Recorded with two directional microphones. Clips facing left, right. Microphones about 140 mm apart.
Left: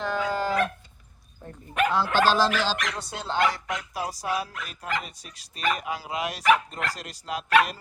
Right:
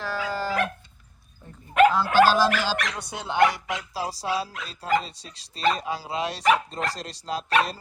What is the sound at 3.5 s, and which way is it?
Speech, 25° right (ahead or behind).